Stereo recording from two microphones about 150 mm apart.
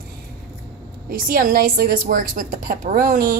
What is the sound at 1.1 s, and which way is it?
A woman's voice, 70° right (ahead or behind).